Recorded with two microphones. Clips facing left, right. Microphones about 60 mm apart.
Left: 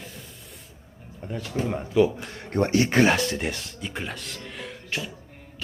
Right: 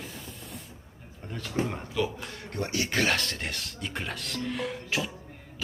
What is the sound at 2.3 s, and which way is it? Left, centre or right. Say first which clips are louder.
Speech: left 9 dB; left.